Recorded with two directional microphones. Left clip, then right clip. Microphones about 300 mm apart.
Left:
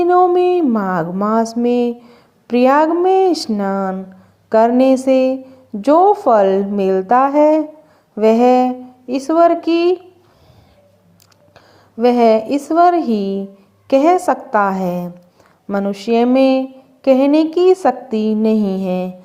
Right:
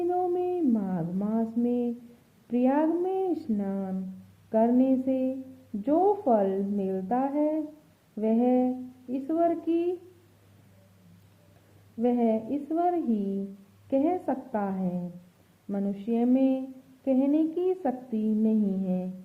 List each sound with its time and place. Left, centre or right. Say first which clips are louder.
0.1 s a sound: left 16 dB; centre
2.5 s a woman's voice: left 14 dB; centre
12.2 s a woman's voice: left 16 dB; centre
14.8 s speech: left 15 dB; left
15.7 s a woman's voice: left 15 dB; centre